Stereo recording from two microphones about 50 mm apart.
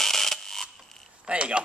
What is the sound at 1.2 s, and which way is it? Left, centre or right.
Speech, right.